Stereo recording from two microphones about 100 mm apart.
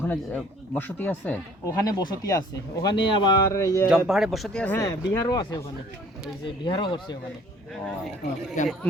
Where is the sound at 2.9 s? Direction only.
50° left (ahead or behind).